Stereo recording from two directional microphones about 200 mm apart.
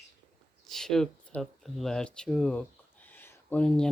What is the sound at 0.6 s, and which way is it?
Speech, centre (ahead or behind).